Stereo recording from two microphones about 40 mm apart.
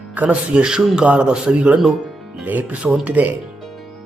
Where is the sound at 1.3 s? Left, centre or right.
Centre.